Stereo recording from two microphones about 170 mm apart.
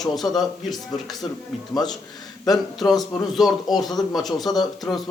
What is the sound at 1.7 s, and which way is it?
Speech, 25° left (ahead or behind).